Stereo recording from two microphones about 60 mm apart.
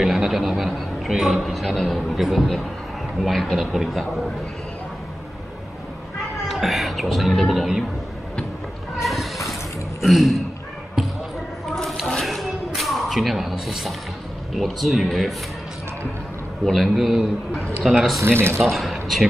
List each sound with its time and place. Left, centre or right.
0.0 s a man's voice: centre
6.4 s a man's voice: centre
9.0 s a sound: centre
10.0 s a man's voice: centre
12.2 s a sound: centre
14.5 s a man's voice: centre
16.6 s a man's voice: centre
18.2 s speech: right
18.6 s a man's voice: centre